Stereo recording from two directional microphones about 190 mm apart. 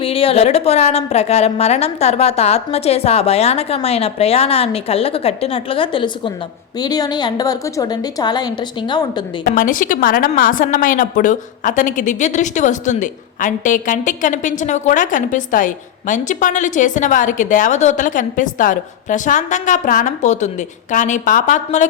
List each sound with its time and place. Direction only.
0.0 s a woman's voice: 30° left (ahead or behind)
9.4 s a woman's voice: 45° left (ahead or behind)